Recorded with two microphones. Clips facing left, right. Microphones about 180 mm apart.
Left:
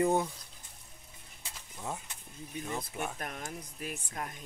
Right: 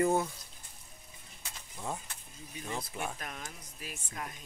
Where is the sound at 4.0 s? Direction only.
40° left (ahead or behind).